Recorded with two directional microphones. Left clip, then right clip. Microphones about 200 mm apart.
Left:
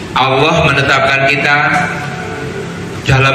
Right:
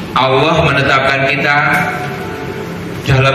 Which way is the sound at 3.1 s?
25° left (ahead or behind).